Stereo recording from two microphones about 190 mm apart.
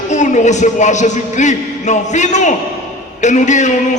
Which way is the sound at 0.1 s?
40° left (ahead or behind).